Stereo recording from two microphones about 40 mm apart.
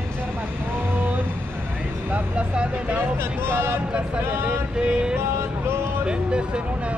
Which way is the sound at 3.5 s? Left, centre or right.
Right.